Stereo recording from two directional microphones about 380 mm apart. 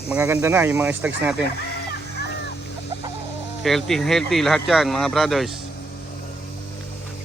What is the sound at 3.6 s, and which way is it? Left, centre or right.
Speech, centre.